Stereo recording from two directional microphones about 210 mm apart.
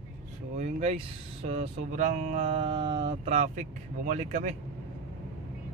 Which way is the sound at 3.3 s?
35° right (ahead or behind).